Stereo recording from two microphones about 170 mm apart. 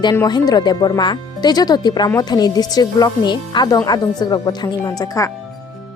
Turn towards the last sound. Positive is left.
turn(degrees=20)  # may be behind; listen again after turning